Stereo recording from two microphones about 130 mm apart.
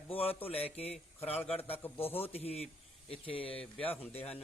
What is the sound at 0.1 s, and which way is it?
A man's voice, 50° left (ahead or behind).